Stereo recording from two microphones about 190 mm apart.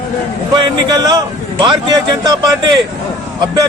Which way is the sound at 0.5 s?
20° right (ahead or behind).